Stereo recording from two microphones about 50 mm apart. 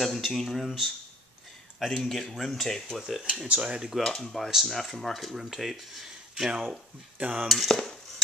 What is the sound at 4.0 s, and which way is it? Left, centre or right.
Speech, centre.